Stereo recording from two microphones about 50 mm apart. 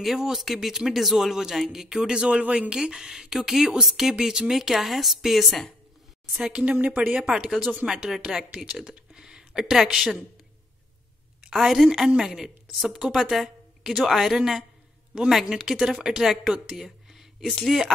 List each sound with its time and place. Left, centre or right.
0.0 s speech: centre
2.4 s speech: right
2.7 s a woman's voice: centre
6.5 s speech: right
7.2 s speech: centre
11.5 s a woman's voice: centre